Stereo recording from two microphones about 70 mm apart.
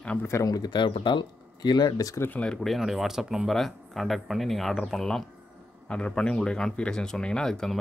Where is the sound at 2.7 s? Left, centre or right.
Centre.